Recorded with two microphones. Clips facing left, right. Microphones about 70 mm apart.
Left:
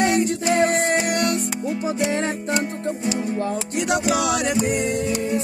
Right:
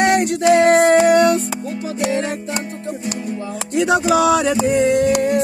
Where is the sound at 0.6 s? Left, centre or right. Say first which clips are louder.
Right 8 dB; right.